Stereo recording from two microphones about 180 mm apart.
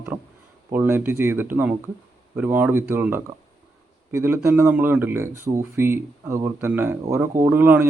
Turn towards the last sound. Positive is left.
turn(degrees=-10)  # may be behind; listen again after turning